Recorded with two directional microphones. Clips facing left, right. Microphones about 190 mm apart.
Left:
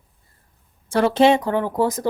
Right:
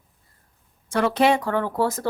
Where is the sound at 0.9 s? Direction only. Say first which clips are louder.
Left 4 dB; 30° left (ahead or behind).